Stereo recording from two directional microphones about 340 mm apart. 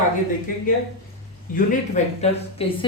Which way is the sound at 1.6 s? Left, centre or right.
Centre.